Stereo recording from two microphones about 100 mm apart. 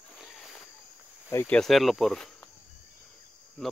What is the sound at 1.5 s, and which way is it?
Speech, 5° left (ahead or behind).